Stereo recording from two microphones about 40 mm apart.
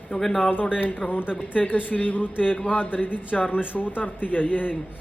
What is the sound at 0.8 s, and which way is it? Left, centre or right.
A man's voice, left.